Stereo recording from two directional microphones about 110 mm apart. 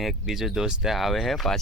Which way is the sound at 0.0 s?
5° right (ahead or behind).